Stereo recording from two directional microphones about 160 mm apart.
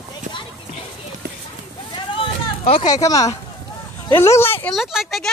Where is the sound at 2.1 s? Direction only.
35° left (ahead or behind).